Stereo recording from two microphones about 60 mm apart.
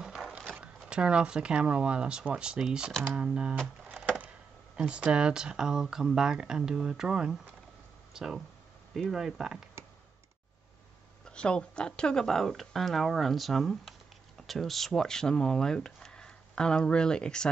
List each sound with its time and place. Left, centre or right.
0.0 s a sound: centre
0.8 s speech: centre
4.7 s speech: centre
11.2 s speech: centre